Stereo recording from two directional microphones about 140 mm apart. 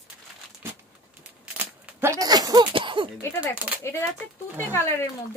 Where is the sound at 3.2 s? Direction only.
20° left (ahead or behind).